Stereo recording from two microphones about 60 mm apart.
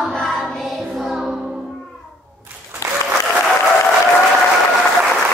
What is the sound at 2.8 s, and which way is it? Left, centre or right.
Applause, right.